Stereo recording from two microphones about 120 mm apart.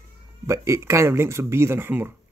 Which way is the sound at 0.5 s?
25° right (ahead or behind).